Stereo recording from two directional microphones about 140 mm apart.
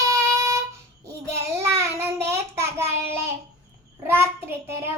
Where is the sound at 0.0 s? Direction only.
20° right (ahead or behind).